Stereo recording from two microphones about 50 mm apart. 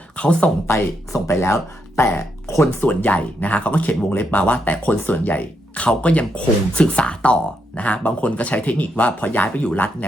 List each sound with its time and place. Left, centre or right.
0.2 s speech: left
0.7 s speech: left
2.8 s speech: left